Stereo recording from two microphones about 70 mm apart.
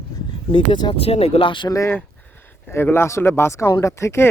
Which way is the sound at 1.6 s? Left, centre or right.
Left.